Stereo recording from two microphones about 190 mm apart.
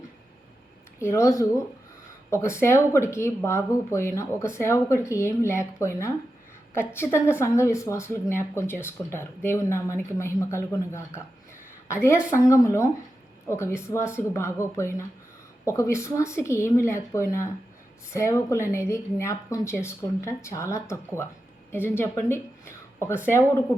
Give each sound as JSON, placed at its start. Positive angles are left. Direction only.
{"t": 0.9, "sound": "speech", "side_deg": 15}
{"t": 12.3, "sound": "speech", "side_deg": 15}